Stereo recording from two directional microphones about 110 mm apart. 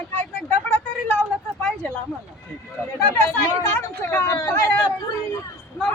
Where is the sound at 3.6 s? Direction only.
20° left (ahead or behind).